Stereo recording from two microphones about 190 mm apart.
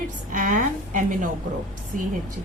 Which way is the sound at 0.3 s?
45° right (ahead or behind).